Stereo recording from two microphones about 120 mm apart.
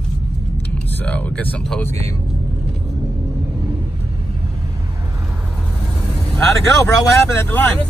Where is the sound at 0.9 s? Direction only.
10° left (ahead or behind).